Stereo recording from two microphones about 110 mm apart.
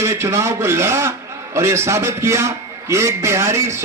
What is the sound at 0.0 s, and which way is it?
Speech, 25° right (ahead or behind).